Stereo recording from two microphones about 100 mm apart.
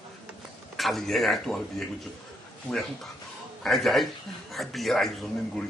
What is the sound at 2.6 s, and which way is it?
Speech, 5° left (ahead or behind).